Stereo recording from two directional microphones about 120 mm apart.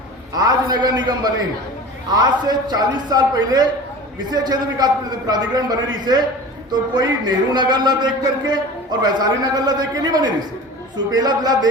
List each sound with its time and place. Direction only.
0.3 s a man's voice: 35° right (ahead or behind)